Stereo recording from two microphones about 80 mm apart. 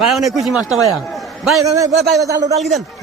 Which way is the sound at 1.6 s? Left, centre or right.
Right.